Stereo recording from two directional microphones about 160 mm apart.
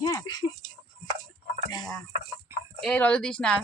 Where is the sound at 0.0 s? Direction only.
25° left (ahead or behind).